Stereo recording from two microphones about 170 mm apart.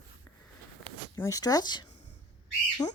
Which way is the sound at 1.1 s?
20° left (ahead or behind).